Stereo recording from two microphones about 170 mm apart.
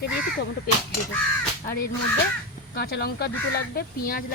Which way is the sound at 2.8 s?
70° left (ahead or behind).